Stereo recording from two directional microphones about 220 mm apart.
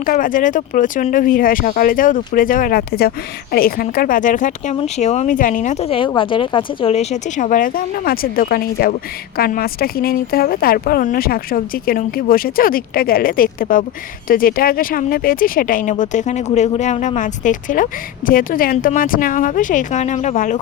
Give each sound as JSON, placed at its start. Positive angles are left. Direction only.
{"t": 0.0, "sound": "speech", "side_deg": 40}